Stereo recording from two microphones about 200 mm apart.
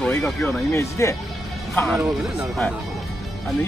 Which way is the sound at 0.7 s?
15° left (ahead or behind).